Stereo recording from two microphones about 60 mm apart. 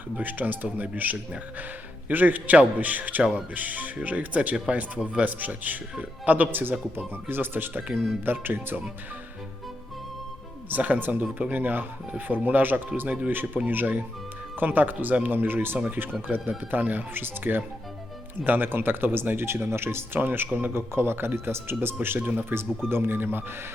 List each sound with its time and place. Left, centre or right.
0.2 s speech: right
10.7 s speech: right
20.7 s speech: right
22.2 s speech: right
22.9 s speech: right